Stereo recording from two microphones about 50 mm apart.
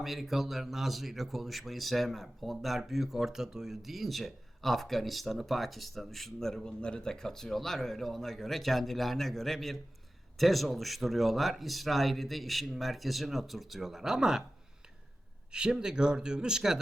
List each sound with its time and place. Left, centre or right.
0.0 s a man's voice: centre
15.5 s speech: centre